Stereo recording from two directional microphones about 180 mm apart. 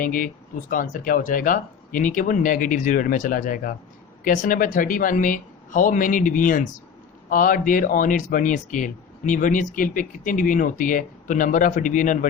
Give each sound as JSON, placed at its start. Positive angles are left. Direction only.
{"t": 0.0, "sound": "speech", "side_deg": 50}